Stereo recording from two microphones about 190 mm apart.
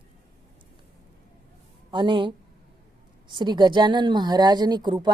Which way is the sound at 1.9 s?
25° right (ahead or behind).